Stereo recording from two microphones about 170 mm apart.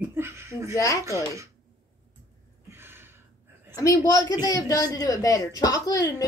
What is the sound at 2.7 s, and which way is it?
Gasp, 15° right (ahead or behind).